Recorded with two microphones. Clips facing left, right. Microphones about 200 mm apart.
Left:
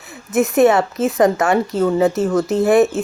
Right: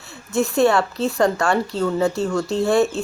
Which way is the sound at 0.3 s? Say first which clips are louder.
Left 4 dB; 20° left (ahead or behind).